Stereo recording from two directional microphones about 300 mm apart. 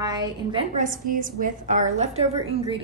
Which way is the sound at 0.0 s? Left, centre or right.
Centre.